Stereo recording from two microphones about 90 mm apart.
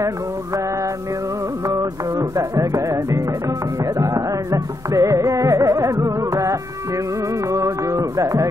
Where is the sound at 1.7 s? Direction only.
40° right (ahead or behind).